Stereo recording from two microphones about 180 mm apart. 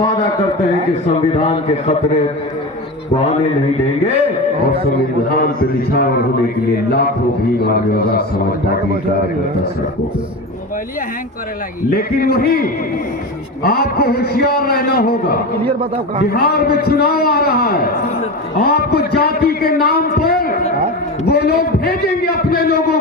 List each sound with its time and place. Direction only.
1.3 s a man's voice: 30° left (ahead or behind)
5.4 s a man's voice: 55° left (ahead or behind)
7.6 s a man's voice: 60° left (ahead or behind)
11.9 s a man's voice: 55° left (ahead or behind)
15.6 s a man's voice: 30° right (ahead or behind)
16.3 s a man's voice: 60° left (ahead or behind)